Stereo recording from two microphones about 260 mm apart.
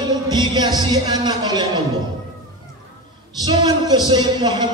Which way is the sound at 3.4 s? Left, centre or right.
Centre.